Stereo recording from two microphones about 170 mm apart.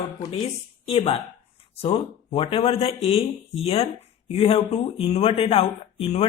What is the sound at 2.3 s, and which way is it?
Speech, 30° left (ahead or behind).